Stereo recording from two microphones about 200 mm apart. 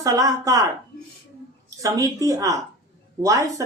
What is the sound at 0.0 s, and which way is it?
Speech, 15° right (ahead or behind).